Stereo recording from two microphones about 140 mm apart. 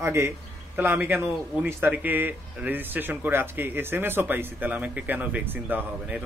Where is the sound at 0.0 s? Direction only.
20° right (ahead or behind).